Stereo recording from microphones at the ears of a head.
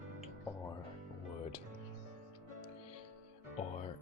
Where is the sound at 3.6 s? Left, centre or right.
Left.